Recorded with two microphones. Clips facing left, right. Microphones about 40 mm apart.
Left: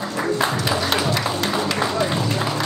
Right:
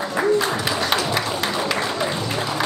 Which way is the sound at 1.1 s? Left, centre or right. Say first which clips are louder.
Left 1 dB; centre.